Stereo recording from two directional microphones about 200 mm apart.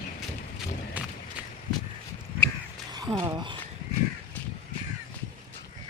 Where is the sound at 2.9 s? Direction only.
20° right (ahead or behind).